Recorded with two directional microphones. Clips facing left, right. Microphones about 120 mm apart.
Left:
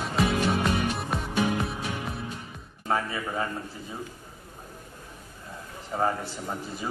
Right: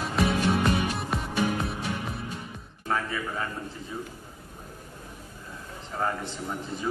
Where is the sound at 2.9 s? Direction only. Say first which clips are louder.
Left 1 dB; 15° left (ahead or behind).